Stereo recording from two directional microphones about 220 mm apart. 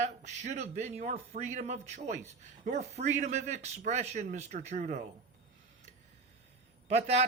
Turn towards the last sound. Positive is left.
turn(degrees=-30)  # may be behind; listen again after turning